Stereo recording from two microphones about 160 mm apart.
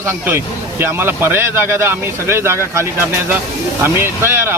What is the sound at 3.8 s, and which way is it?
Speech, 15° right (ahead or behind).